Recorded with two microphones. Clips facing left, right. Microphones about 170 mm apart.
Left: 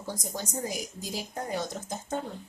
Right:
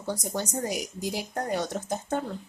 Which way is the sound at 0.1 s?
70° right (ahead or behind).